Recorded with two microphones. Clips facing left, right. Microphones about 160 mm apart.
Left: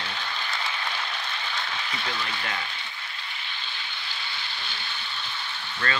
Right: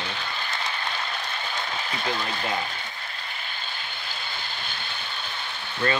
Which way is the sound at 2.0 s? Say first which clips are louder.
Right 6 dB; 25° right (ahead or behind).